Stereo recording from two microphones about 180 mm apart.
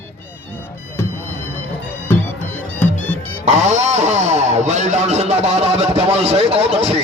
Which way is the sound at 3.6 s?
40° right (ahead or behind).